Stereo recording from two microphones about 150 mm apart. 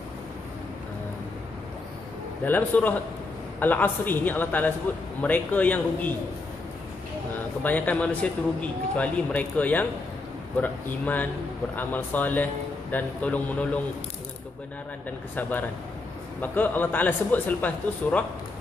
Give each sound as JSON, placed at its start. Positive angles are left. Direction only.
{"t": 2.4, "sound": "a man's voice", "side_deg": 10}
{"t": 7.6, "sound": "a man's voice", "side_deg": 10}
{"t": 15.0, "sound": "a man's voice", "side_deg": 10}